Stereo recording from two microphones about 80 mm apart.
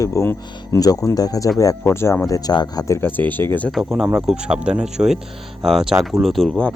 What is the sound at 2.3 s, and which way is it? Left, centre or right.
Speech, left.